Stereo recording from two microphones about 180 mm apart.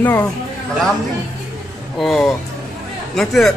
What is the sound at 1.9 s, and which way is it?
Speech, centre (ahead or behind).